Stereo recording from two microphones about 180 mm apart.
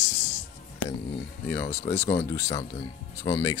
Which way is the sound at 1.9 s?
15° left (ahead or behind).